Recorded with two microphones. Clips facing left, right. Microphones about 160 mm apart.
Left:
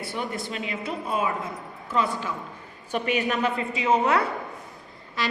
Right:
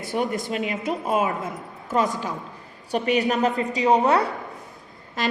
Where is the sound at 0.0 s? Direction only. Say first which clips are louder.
Right 6 dB; 50° right (ahead or behind).